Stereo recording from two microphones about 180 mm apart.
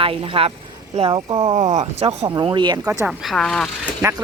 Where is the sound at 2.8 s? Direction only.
15° right (ahead or behind).